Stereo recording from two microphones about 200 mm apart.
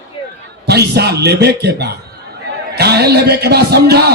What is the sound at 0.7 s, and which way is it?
A man's voice, 55° right (ahead or behind).